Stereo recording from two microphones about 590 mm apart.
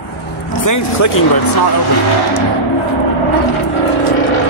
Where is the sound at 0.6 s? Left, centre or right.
Left.